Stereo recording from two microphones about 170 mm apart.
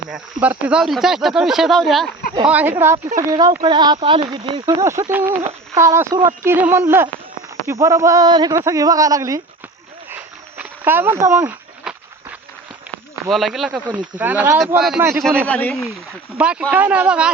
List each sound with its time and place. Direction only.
0.4 s speech: 5° right (ahead or behind)
2.5 s speech: 10° right (ahead or behind)
10.1 s a sound: 10° right (ahead or behind)
13.3 s speech: centre (ahead or behind)
16.4 s speech: 5° right (ahead or behind)